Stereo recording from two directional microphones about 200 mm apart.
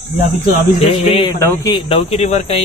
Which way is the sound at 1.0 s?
30° left (ahead or behind).